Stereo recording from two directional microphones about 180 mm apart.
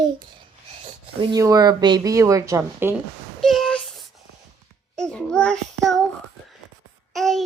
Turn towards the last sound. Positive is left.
turn(degrees=0)  # may be behind; listen again after turning